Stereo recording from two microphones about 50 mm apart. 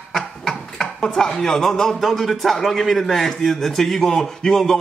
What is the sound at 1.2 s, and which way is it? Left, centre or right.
A man's voice, centre.